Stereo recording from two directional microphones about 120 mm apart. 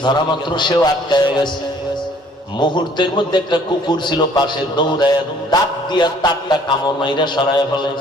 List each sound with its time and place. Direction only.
0.0 s a man's voice: 40° left (ahead or behind)
2.6 s a man's voice: 40° left (ahead or behind)